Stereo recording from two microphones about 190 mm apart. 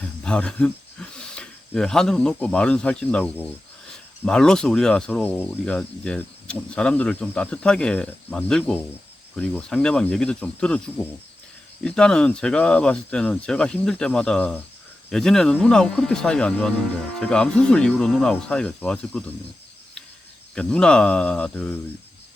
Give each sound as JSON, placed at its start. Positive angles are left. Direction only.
{"t": 0.0, "sound": "speech", "side_deg": 5}
{"t": 20.6, "sound": "speech", "side_deg": 5}